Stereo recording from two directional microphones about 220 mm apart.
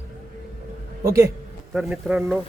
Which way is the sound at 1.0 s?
15° right (ahead or behind).